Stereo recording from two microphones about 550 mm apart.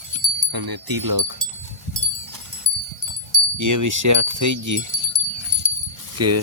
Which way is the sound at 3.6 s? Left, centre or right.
Right.